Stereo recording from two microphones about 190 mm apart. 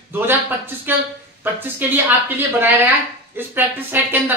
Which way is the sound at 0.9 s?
10° right (ahead or behind).